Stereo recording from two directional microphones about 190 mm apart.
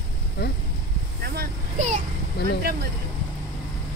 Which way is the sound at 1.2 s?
55° right (ahead or behind).